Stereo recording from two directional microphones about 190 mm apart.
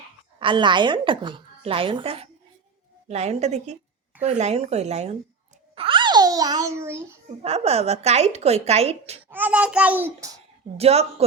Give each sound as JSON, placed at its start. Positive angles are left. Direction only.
{"t": 0.3, "sound": "a woman's voice", "side_deg": -25}
{"t": 5.7, "sound": "a sound", "side_deg": -25}
{"t": 7.4, "sound": "a woman's voice", "side_deg": -30}
{"t": 9.3, "sound": "a child's voice", "side_deg": -10}
{"t": 10.8, "sound": "a woman's voice", "side_deg": -35}